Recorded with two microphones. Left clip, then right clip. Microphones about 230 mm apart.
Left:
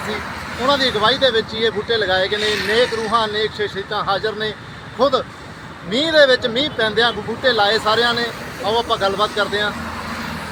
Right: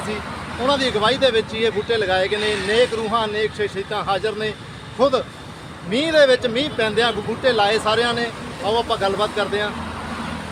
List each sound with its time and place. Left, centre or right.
0.7 s speech: centre
2.4 s speech: left
3.1 s speech: centre